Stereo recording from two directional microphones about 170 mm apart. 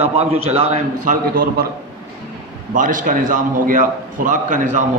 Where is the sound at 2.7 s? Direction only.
50° right (ahead or behind).